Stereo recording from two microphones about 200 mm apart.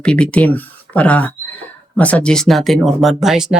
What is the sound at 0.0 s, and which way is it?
Speech, 5° left (ahead or behind).